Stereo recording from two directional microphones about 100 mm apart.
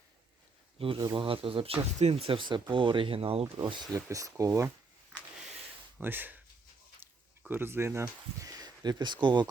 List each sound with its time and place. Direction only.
0.9 s speech: 40° right (ahead or behind)
1.2 s speech: 60° right (ahead or behind)
3.9 s speech: 35° right (ahead or behind)
6.0 s speech: 20° right (ahead or behind)
7.4 s speech: 20° right (ahead or behind); by 9.5 s 50° right (ahead or behind)